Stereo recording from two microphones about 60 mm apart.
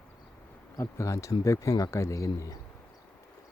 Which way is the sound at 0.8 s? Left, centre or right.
Left.